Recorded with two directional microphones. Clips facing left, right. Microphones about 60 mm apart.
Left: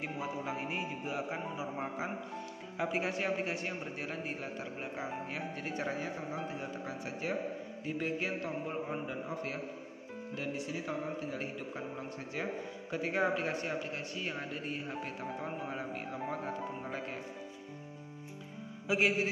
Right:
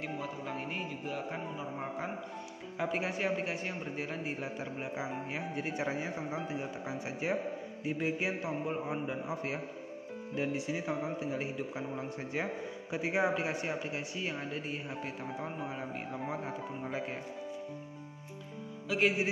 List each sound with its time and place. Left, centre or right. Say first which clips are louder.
0.0 s a man's voice: left 1 dB; centre
18.9 s a man's voice: left 1 dB; centre